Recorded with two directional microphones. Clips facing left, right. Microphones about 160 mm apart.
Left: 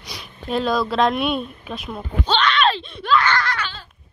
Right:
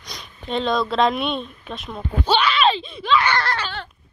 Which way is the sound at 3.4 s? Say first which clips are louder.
Right 1 dB; 30° right (ahead or behind).